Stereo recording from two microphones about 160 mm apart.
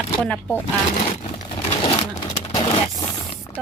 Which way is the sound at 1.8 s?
35° left (ahead or behind).